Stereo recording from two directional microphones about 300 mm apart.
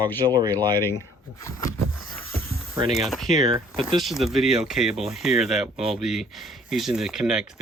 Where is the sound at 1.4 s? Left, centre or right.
Centre.